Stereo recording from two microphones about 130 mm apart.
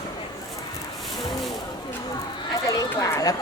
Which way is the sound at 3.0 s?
30° left (ahead or behind).